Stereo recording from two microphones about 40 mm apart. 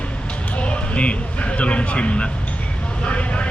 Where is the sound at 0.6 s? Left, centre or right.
Left.